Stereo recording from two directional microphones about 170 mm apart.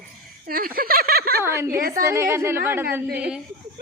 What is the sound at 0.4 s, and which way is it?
Speech, 60° right (ahead or behind).